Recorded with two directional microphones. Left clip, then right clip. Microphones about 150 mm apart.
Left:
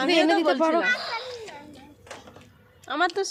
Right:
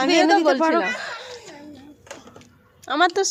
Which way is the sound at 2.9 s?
40° right (ahead or behind).